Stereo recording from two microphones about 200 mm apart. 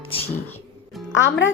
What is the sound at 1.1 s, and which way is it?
Speech, 70° left (ahead or behind).